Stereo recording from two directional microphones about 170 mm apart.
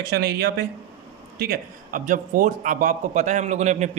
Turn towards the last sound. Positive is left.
turn(degrees=-45)  # may be behind; listen again after turning